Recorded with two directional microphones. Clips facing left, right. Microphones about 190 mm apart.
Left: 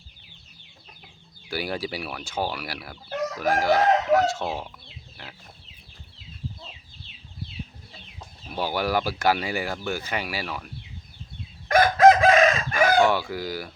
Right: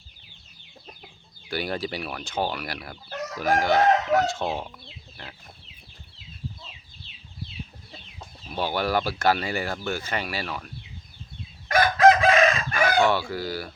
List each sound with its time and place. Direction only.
1.5 s speech: 10° left (ahead or behind)
8.5 s speech: 10° left (ahead or behind)
11.7 s chicken: 45° left (ahead or behind)
13.0 s speech: 15° left (ahead or behind)